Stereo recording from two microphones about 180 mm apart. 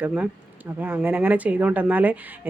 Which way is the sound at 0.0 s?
10° right (ahead or behind).